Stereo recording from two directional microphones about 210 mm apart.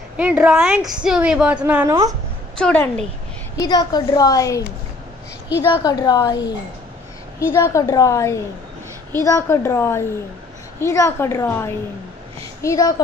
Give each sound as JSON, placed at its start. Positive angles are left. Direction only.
{"t": 0.2, "sound": "a woman's voice", "side_deg": -5}
{"t": 2.5, "sound": "a woman's voice", "side_deg": 5}
{"t": 3.5, "sound": "a woman's voice", "side_deg": 20}
{"t": 5.7, "sound": "a woman's voice", "side_deg": 20}
{"t": 7.5, "sound": "a woman's voice", "side_deg": 15}